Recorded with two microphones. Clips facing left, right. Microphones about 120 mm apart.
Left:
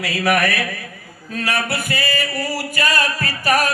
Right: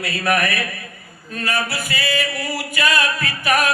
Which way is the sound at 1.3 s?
85° left.